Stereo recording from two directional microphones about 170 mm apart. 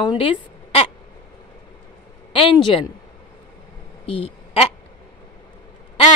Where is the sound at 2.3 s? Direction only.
30° left (ahead or behind).